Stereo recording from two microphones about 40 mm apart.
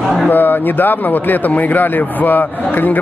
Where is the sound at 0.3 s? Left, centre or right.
Left.